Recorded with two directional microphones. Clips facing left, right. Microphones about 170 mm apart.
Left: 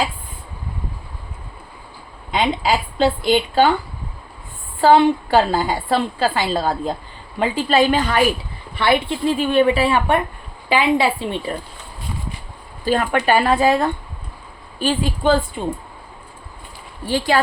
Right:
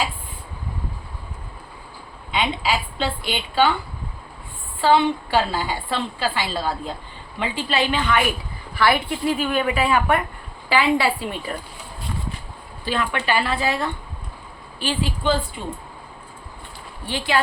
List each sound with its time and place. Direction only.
2.3 s a woman's voice: 40° left (ahead or behind)
4.8 s a woman's voice: 45° left (ahead or behind)
8.7 s speech: 25° left (ahead or behind)
12.8 s a woman's voice: 45° left (ahead or behind)
17.1 s a woman's voice: 40° left (ahead or behind)